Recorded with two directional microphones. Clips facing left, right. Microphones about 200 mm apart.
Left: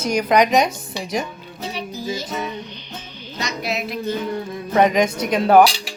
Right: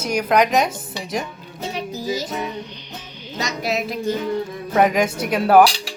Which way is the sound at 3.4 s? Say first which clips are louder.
Right 2 dB; 40° right (ahead or behind).